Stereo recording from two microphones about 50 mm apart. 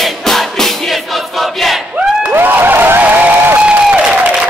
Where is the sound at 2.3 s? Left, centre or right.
Right.